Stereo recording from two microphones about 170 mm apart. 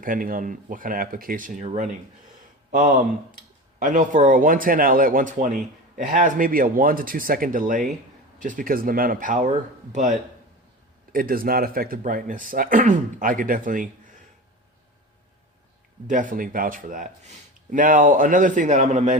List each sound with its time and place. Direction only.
0.0 s speech: 55° right (ahead or behind)
3.8 s speech: 50° right (ahead or behind)
11.1 s speech: 60° right (ahead or behind)
16.0 s speech: 50° right (ahead or behind)